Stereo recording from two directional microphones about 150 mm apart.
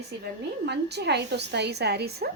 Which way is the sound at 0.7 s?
90° right.